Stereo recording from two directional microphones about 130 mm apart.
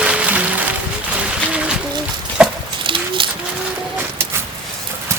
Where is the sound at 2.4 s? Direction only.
5° right (ahead or behind).